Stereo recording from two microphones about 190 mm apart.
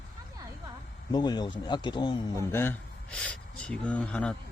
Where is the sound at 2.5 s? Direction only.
10° left (ahead or behind).